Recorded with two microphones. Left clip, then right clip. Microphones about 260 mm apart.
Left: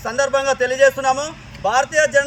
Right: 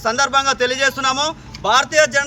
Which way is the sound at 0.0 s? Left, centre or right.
Right.